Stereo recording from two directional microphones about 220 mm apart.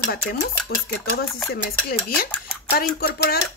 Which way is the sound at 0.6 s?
45° left (ahead or behind).